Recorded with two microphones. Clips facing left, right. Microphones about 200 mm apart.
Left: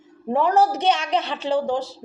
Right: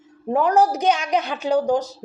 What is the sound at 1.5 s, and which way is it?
Speech, 40° right (ahead or behind).